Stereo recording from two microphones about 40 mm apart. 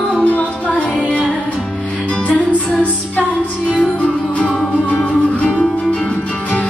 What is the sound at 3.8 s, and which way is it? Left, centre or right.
Music, left.